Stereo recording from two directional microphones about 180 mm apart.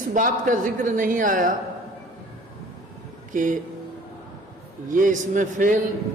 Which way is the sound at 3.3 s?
45° right (ahead or behind).